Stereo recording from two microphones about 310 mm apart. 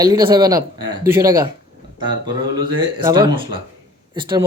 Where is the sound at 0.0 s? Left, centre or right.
Centre.